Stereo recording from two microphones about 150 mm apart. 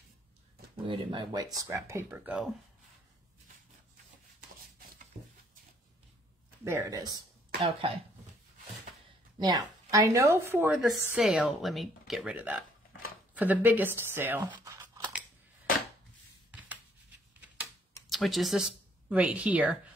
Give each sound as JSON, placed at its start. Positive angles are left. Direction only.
{"t": 0.8, "sound": "speech", "side_deg": -30}
{"t": 6.6, "sound": "speech", "side_deg": -20}
{"t": 7.6, "sound": "cough", "side_deg": -35}
{"t": 9.4, "sound": "speech", "side_deg": -25}
{"t": 10.7, "sound": "speech", "side_deg": -5}
{"t": 18.1, "sound": "speech", "side_deg": 0}